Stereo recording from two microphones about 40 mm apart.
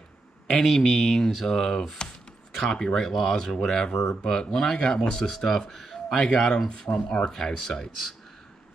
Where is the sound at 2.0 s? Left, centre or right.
Centre.